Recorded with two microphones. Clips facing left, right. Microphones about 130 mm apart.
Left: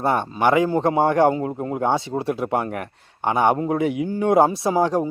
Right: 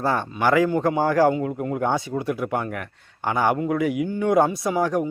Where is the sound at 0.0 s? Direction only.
25° left (ahead or behind).